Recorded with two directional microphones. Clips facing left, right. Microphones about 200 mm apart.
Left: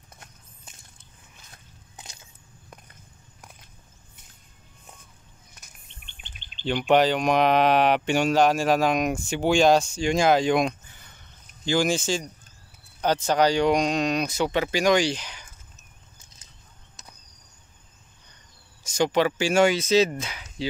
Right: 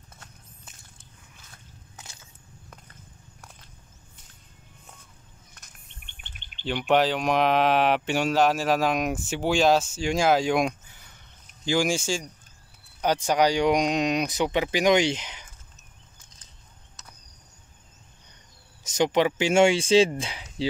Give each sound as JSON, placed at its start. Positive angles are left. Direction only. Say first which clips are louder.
{"t": 6.0, "sound": "bird", "louder": "left 1 dB", "side_deg": -55}
{"t": 6.6, "sound": "speech", "louder": "left 2 dB", "side_deg": -5}
{"t": 18.9, "sound": "speech", "louder": "even", "side_deg": -20}